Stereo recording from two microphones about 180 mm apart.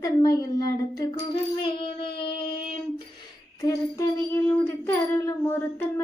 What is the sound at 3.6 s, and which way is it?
Child singing, 20° left (ahead or behind).